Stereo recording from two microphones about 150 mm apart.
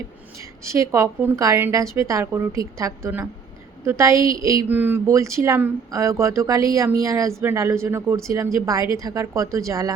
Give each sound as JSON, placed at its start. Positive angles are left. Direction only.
{"t": 0.6, "sound": "a woman's voice", "side_deg": -20}